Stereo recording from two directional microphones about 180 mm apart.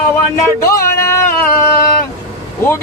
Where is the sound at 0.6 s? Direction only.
15° left (ahead or behind).